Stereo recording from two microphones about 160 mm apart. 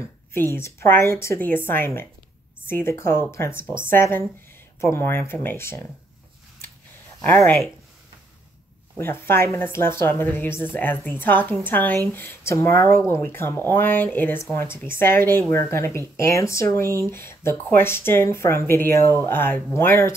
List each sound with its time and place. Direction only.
0.0 s speech: 15° left (ahead or behind)
8.9 s speech: 15° left (ahead or behind)